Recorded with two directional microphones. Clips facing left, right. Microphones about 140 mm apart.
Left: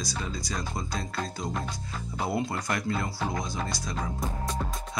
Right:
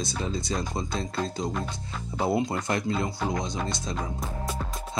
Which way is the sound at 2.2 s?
25° right (ahead or behind).